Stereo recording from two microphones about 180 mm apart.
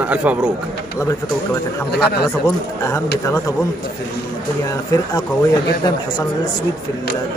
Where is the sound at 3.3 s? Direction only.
20° left (ahead or behind).